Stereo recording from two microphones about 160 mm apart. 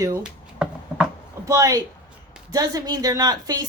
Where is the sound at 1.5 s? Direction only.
20° right (ahead or behind).